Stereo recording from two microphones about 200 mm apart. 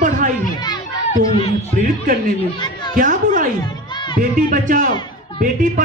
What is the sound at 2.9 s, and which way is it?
Speech, 40° right (ahead or behind).